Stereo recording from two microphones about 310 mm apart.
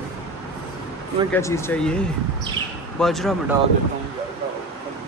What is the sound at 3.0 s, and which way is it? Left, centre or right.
Speech, centre.